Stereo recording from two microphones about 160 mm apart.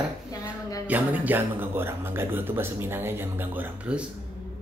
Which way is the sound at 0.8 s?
10° right (ahead or behind).